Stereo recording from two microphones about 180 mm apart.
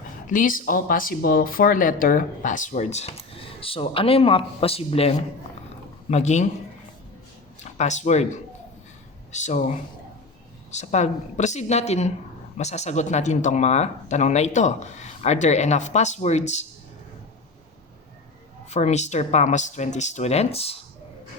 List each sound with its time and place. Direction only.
0.3 s speech: 50° left (ahead or behind)
7.6 s speech: 40° left (ahead or behind)
18.7 s speech: 40° left (ahead or behind)